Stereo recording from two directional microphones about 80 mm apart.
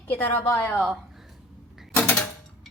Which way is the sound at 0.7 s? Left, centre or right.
Centre.